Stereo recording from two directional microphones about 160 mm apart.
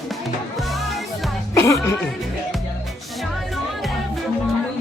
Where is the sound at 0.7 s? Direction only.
Centre (ahead or behind).